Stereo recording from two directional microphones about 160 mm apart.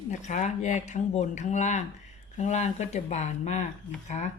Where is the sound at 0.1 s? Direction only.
50° left (ahead or behind).